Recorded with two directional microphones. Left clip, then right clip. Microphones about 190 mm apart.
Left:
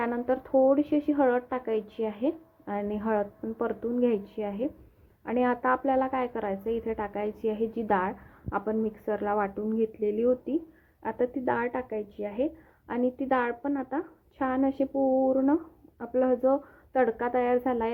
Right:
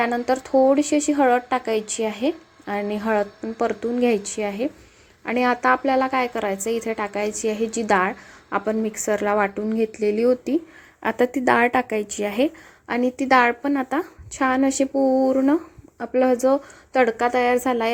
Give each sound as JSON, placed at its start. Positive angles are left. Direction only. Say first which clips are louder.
{"t": 0.0, "sound": "a woman's voice", "louder": "right 7 dB", "side_deg": -20}
{"t": 11.0, "sound": "a woman's voice", "louder": "right 9 dB", "side_deg": -40}
{"t": 12.9, "sound": "a woman's voice", "louder": "right 9 dB", "side_deg": -25}